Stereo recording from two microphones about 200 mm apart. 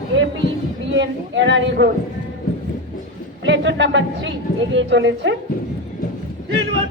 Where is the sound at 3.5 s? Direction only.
65° right (ahead or behind).